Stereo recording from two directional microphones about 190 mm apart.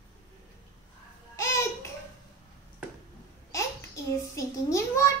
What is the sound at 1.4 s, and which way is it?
Babbling, 15° left (ahead or behind).